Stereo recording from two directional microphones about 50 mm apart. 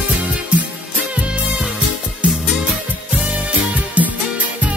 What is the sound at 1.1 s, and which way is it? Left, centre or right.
Music, right.